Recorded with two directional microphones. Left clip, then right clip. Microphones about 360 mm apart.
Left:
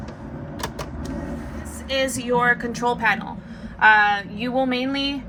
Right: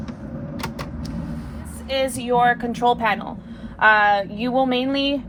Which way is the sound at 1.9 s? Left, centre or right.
Right.